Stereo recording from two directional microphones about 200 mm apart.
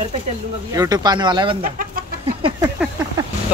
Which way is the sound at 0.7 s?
20° right (ahead or behind).